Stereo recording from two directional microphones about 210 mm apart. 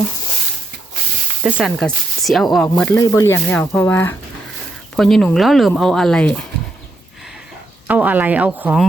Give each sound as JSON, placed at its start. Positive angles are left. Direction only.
{"t": 1.5, "sound": "speech", "side_deg": 0}
{"t": 7.9, "sound": "speech", "side_deg": -5}